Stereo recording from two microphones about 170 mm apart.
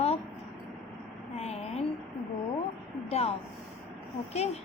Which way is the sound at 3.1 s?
35° left (ahead or behind).